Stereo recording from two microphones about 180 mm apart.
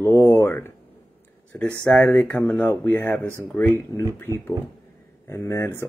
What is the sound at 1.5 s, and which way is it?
Speech, 10° left (ahead or behind).